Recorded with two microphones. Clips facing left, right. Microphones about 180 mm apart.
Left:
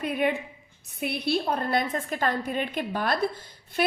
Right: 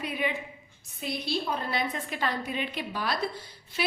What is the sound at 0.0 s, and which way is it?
A woman's voice, 50° left (ahead or behind).